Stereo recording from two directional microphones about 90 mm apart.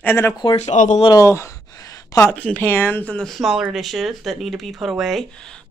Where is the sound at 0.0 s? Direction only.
25° left (ahead or behind).